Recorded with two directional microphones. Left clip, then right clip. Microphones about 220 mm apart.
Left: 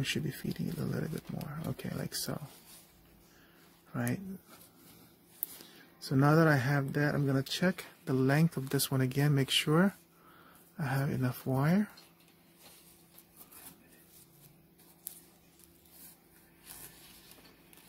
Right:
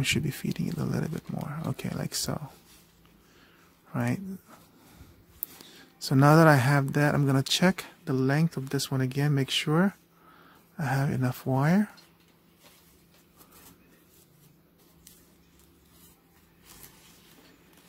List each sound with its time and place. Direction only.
0.0 s speech: 20° right (ahead or behind)
3.9 s speech: 15° right (ahead or behind)
5.6 s speech: 20° right (ahead or behind)